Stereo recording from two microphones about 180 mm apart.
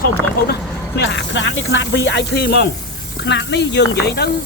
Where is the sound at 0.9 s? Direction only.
75° left (ahead or behind).